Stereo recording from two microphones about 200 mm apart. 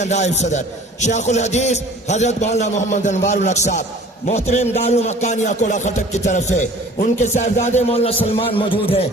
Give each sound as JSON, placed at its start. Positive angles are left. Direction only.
{"t": 0.0, "sound": "a man's voice", "side_deg": 35}